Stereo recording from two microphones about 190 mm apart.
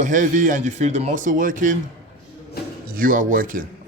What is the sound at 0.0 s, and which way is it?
Speech, 40° right (ahead or behind).